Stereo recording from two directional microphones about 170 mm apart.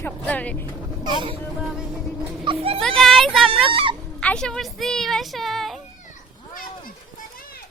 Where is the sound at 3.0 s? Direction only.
Centre (ahead or behind).